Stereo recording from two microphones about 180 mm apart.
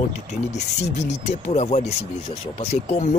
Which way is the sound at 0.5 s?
40° left (ahead or behind).